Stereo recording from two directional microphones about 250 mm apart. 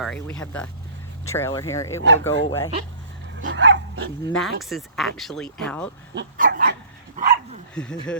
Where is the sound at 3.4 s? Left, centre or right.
Right.